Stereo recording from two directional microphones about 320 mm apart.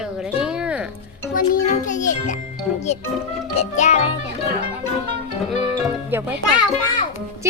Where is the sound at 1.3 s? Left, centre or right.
Left.